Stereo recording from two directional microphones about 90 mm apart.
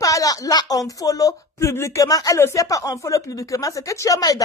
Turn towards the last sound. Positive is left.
turn(degrees=40)  # may be behind; listen again after turning